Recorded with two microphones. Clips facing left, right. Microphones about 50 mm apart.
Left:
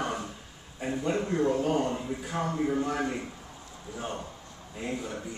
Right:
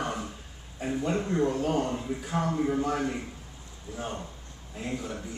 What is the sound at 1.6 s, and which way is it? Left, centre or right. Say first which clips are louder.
A man's voice: even; centre.